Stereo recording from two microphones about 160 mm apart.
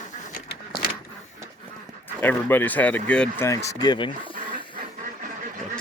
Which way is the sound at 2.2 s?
10° left (ahead or behind).